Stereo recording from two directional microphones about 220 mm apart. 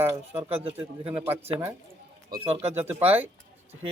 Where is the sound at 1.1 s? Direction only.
10° right (ahead or behind).